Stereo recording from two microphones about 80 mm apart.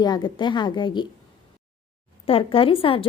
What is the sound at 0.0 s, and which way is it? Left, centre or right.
A woman's voice, left.